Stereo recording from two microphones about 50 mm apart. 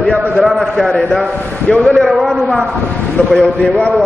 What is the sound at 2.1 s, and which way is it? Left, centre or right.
Speech, centre.